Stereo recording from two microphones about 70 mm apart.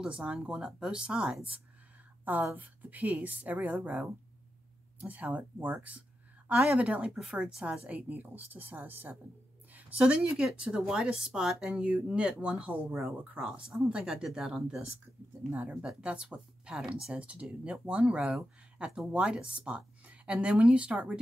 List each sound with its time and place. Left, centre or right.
0.0 s speech: centre
2.5 s speech: right
7.8 s speech: right
9.8 s speech: centre
13.5 s speech: centre
15.8 s speech: centre